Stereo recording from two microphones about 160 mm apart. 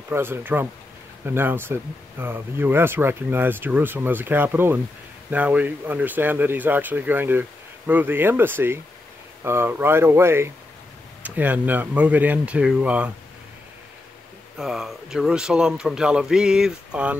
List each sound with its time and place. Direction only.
0.1 s speech: 15° right (ahead or behind)
14.6 s speech: centre (ahead or behind)